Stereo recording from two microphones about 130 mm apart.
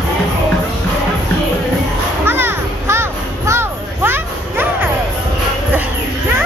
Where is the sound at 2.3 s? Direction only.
15° right (ahead or behind).